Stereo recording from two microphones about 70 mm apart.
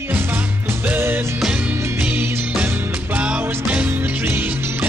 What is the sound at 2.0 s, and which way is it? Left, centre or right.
Music, right.